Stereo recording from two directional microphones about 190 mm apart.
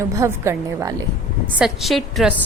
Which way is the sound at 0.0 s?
15° right (ahead or behind).